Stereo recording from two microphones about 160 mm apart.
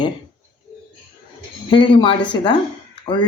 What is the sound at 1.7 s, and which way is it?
Speech, 30° left (ahead or behind).